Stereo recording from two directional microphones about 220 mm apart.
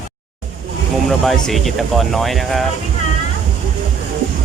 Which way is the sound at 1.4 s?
Centre (ahead or behind).